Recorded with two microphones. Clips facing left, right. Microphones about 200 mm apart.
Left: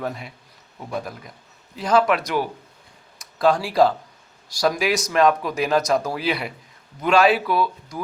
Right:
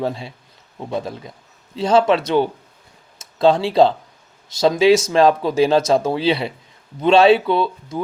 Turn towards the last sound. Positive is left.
turn(degrees=-25)  # may be behind; listen again after turning